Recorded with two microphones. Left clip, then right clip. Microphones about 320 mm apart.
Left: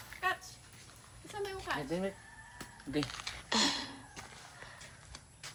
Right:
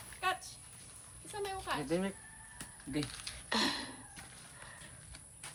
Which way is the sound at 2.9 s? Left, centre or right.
Centre.